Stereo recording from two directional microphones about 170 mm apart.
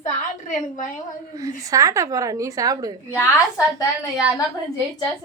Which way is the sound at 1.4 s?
20° right (ahead or behind).